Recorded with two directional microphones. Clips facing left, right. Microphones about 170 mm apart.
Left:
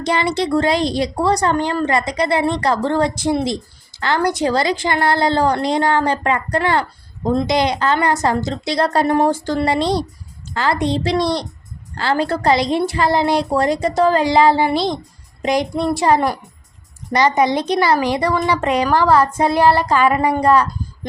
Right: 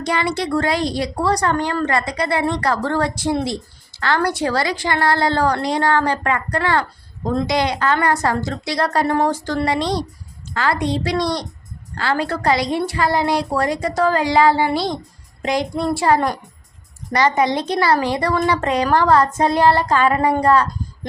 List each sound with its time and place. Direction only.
0.0 s speech: 25° left (ahead or behind)